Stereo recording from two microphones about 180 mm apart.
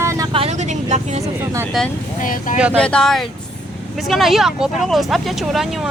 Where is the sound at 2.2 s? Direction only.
50° left (ahead or behind).